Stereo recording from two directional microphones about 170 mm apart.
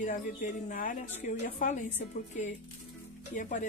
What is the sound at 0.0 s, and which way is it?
Speech, 50° left (ahead or behind).